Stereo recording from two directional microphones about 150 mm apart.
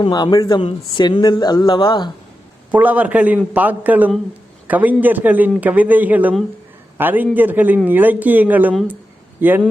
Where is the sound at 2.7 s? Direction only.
10° right (ahead or behind).